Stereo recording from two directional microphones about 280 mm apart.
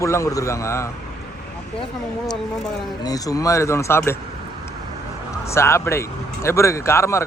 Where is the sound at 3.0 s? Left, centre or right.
Centre.